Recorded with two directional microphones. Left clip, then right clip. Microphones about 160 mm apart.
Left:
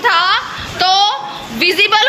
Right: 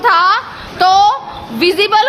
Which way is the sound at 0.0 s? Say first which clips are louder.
Right 2 dB; 40° right (ahead or behind).